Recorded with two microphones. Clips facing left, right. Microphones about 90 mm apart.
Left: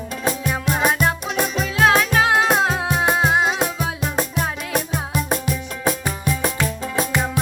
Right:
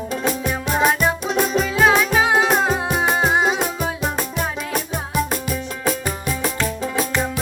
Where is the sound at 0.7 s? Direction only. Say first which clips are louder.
Right 3 dB; 5° left (ahead or behind).